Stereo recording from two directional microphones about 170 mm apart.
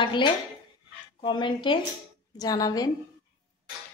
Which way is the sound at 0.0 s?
30° left (ahead or behind).